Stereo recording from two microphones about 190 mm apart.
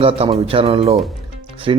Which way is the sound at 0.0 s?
30° right (ahead or behind).